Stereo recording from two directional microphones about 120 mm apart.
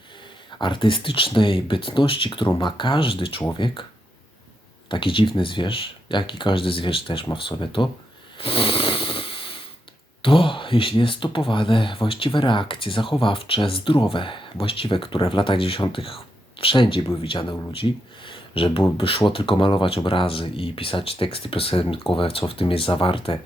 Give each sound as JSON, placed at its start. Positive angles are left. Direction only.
{"t": 0.6, "sound": "speech", "side_deg": 45}
{"t": 4.9, "sound": "speech", "side_deg": 45}
{"t": 8.4, "sound": "wheeze", "side_deg": 50}
{"t": 10.2, "sound": "speech", "side_deg": 45}
{"t": 18.3, "sound": "a sound", "side_deg": 50}
{"t": 18.9, "sound": "speech", "side_deg": 50}